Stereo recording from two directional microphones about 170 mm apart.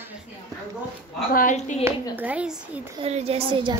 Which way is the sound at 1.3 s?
50° left (ahead or behind).